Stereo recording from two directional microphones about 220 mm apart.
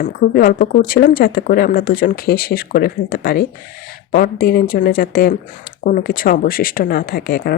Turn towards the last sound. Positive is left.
turn(degrees=45)  # may be behind; listen again after turning